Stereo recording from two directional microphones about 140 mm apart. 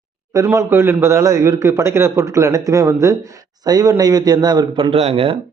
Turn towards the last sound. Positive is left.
turn(degrees=-45)  # may be behind; listen again after turning